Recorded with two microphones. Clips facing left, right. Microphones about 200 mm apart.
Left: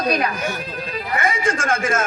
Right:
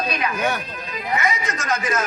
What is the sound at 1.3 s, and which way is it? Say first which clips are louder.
Speech: left 7 dB; 50° left (ahead or behind).